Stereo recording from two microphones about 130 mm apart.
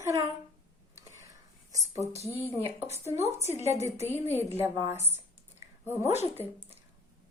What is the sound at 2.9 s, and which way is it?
Speech, 55° left (ahead or behind).